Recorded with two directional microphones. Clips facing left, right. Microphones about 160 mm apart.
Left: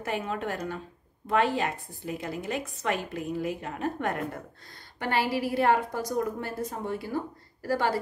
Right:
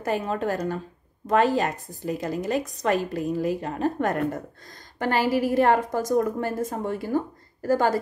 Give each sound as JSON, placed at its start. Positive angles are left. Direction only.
{"t": 0.0, "sound": "a woman's voice", "side_deg": -40}